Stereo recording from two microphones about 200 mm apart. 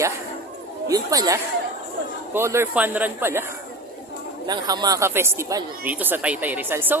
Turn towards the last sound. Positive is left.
turn(degrees=-10)  # may be behind; listen again after turning